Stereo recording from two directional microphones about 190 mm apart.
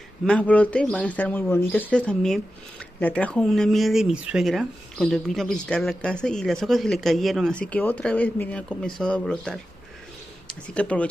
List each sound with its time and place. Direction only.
0.2 s speech: 5° left (ahead or behind)
10.7 s speech: 5° left (ahead or behind)